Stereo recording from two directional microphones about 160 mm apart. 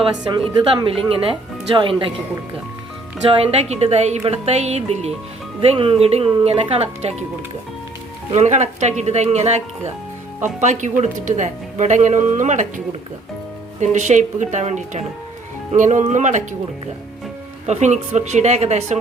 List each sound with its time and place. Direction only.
0.0 s speech: 35° right (ahead or behind)
3.2 s speech: 35° right (ahead or behind)
8.3 s speech: 45° right (ahead or behind)
17.7 s speech: 45° right (ahead or behind)